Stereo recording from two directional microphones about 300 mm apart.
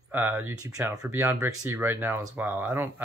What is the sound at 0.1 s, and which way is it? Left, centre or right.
Speech, centre.